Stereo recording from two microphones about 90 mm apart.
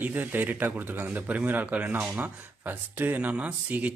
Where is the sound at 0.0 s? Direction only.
20° right (ahead or behind).